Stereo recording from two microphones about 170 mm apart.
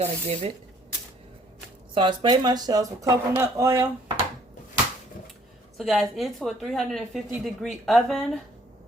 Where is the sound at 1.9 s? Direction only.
25° right (ahead or behind).